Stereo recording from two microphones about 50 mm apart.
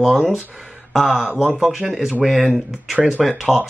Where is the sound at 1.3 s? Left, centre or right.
Centre.